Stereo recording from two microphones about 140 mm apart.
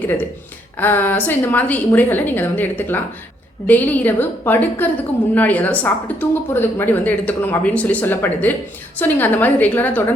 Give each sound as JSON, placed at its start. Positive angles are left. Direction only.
{"t": 0.8, "sound": "speech", "side_deg": 15}